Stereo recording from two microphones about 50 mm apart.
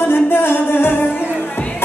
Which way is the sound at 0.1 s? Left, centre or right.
Left.